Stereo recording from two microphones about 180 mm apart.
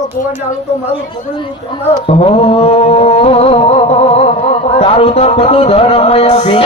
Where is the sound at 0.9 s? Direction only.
30° left (ahead or behind).